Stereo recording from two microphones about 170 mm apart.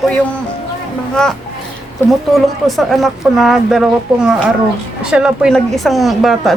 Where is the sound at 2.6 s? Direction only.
Centre (ahead or behind).